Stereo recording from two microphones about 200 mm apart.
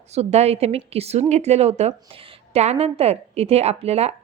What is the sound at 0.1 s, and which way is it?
A woman's voice, 35° right (ahead or behind).